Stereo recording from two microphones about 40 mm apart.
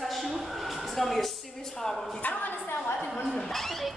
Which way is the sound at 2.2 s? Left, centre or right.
Left.